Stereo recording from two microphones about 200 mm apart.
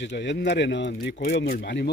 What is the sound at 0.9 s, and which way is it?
Speech, 45° left (ahead or behind).